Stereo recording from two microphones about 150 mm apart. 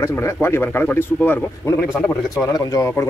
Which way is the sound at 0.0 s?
15° left (ahead or behind).